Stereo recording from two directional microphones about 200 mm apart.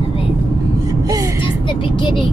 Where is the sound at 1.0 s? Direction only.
15° right (ahead or behind).